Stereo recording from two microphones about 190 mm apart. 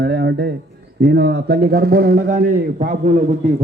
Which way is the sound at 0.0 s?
60° right (ahead or behind).